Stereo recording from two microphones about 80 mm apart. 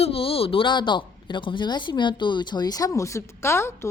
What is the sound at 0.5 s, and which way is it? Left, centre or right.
Speech, left.